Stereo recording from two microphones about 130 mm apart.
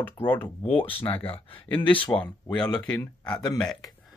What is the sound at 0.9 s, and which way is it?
Speech, 40° left (ahead or behind).